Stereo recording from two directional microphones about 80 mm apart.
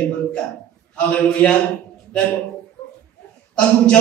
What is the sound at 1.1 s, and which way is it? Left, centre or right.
Speech, centre.